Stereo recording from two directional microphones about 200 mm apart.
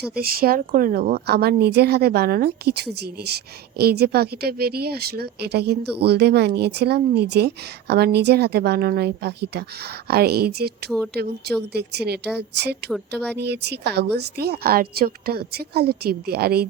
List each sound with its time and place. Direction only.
0.2 s speech: 50° right (ahead or behind)